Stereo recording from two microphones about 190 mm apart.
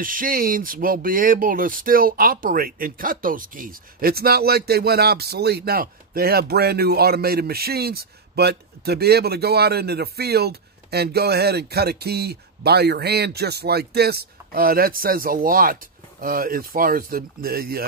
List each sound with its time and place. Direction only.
0.0 s speech: 45° right (ahead or behind)